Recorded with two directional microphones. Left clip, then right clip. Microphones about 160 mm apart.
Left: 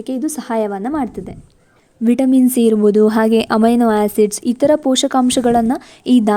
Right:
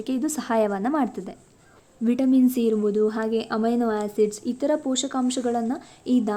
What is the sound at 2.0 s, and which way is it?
Speech, 45° left (ahead or behind).